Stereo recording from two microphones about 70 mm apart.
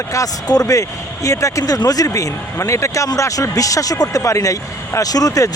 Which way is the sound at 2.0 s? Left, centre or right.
Left.